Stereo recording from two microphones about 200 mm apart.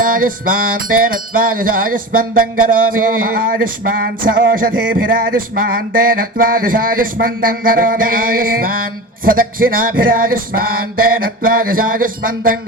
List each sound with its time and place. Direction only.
0.0 s music: 45° right (ahead or behind)